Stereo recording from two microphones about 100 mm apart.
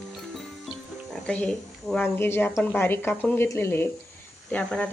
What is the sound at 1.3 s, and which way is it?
Speech, 10° left (ahead or behind).